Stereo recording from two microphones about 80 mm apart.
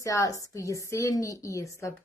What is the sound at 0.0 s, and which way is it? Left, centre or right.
A woman's voice, left.